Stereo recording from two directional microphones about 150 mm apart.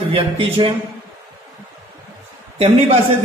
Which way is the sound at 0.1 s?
40° right (ahead or behind).